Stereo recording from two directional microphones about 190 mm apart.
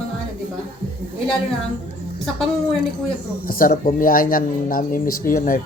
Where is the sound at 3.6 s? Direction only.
50° left (ahead or behind).